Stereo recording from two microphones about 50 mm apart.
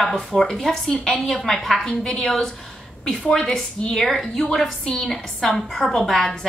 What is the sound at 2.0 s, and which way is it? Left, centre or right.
Speech, centre.